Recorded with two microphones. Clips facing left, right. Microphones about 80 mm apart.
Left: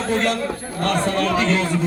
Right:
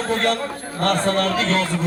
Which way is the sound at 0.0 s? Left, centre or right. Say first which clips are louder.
Even; right.